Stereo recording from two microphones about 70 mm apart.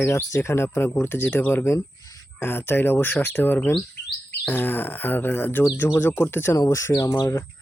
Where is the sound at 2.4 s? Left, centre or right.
Left.